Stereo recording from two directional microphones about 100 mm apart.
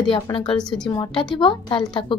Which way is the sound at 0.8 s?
50° left (ahead or behind).